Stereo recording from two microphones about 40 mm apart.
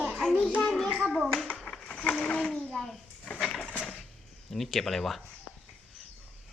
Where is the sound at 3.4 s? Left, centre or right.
Centre.